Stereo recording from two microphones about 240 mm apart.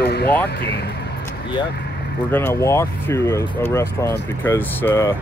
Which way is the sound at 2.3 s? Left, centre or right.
Centre.